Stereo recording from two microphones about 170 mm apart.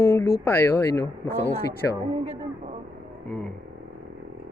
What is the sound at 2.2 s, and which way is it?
Speech, 40° right (ahead or behind).